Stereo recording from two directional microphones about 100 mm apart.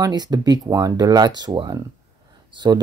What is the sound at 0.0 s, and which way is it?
Speech, 45° right (ahead or behind).